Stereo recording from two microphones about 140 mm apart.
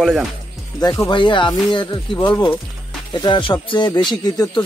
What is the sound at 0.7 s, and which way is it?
Speech, 25° left (ahead or behind).